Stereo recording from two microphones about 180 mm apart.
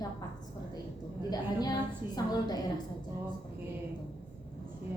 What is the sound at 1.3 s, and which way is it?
A woman's voice, 20° left (ahead or behind).